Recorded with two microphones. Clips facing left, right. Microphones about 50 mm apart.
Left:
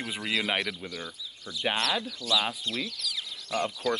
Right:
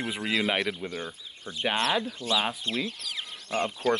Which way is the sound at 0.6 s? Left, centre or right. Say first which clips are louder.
Right 3 dB; right.